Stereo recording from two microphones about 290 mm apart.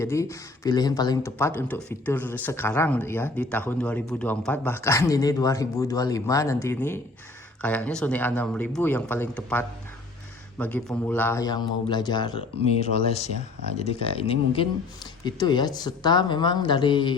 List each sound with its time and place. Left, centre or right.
0.0 s speech: centre